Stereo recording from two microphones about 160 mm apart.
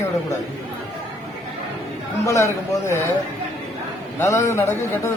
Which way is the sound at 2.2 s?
20° left (ahead or behind).